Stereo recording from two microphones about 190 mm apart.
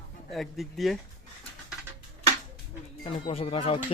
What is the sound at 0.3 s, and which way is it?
Speech, centre (ahead or behind).